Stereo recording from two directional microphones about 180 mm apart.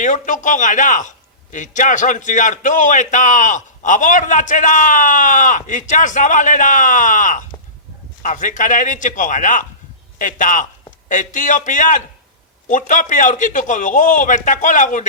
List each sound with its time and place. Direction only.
0.0 s a man's voice: 45° left (ahead or behind)